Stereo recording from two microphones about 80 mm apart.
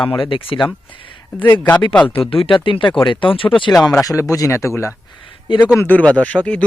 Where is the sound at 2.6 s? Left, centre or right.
Left.